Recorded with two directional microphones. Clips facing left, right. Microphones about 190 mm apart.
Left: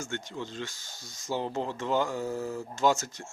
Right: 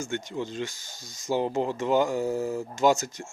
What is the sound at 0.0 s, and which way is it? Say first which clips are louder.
Speech: right 5 dB; 15° right (ahead or behind).